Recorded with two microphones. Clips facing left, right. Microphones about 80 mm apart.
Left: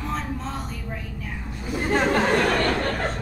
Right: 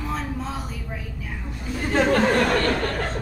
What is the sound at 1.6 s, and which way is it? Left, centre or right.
Speech, centre.